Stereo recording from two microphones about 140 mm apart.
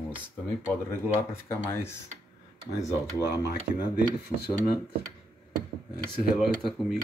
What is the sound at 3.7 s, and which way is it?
Speech, 60° right (ahead or behind).